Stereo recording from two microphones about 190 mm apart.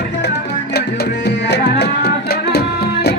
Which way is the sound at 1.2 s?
60° left (ahead or behind).